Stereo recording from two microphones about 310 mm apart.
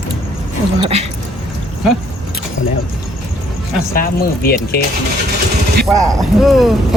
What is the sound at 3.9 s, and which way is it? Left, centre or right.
Speech, left.